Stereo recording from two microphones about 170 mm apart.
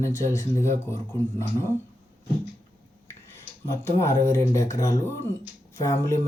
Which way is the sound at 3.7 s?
15° left (ahead or behind).